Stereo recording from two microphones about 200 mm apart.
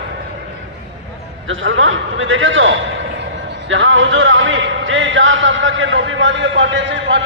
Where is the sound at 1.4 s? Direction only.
70° right (ahead or behind).